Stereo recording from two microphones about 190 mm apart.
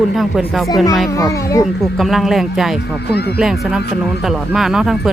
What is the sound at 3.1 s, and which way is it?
Speech, 60° left (ahead or behind).